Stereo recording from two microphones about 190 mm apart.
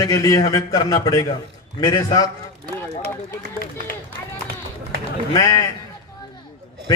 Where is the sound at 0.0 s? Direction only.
20° left (ahead or behind).